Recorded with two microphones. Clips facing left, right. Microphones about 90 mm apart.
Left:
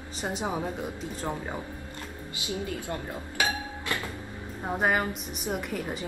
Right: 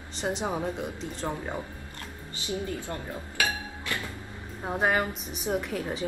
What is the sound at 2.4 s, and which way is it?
Speech, 20° left (ahead or behind).